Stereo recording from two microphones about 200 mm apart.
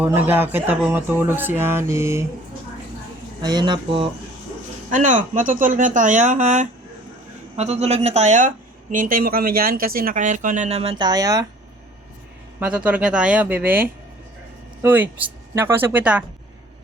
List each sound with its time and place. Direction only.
0.0 s speech: 10° right (ahead or behind)
3.4 s speech: 20° right (ahead or behind)
4.9 s speech: 40° right (ahead or behind); by 11.4 s 20° right (ahead or behind)
12.5 s speech: 5° right (ahead or behind)